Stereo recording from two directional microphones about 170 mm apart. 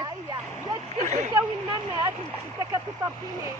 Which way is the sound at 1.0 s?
45° right (ahead or behind).